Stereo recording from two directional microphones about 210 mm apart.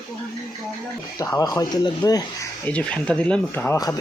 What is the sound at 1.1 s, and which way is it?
Speech, 15° left (ahead or behind).